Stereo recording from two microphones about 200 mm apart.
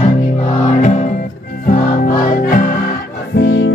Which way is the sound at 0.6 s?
40° left (ahead or behind).